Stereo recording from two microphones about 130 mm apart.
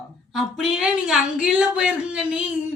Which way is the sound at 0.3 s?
Centre (ahead or behind).